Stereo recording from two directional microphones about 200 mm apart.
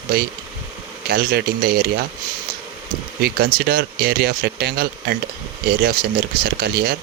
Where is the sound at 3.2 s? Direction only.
50° right (ahead or behind).